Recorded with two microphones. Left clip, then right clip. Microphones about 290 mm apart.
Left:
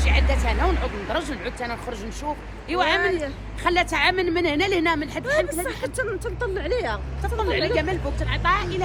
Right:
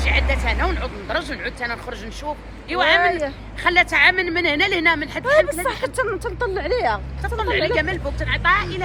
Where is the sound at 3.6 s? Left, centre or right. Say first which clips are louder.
Right 5 dB; centre.